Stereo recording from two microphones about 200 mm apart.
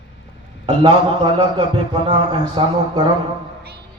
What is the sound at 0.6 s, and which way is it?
A man's voice, 25° right (ahead or behind).